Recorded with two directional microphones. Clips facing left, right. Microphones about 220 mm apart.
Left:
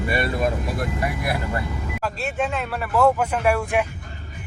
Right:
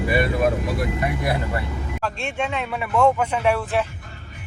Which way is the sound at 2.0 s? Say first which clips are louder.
Left 1 dB; 5° left (ahead or behind).